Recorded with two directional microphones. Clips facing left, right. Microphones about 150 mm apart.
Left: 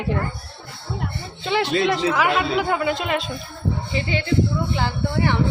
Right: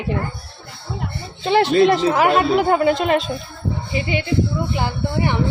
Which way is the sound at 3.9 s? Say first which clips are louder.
Right 2 dB; 15° right (ahead or behind).